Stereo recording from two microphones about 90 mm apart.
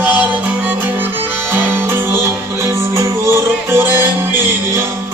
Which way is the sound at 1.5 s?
25° right (ahead or behind).